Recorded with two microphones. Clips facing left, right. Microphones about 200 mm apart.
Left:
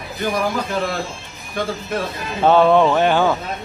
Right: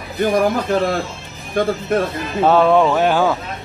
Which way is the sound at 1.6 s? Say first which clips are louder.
Right 6 dB; 50° right (ahead or behind).